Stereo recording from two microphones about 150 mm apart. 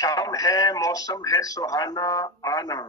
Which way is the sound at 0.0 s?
25° left (ahead or behind).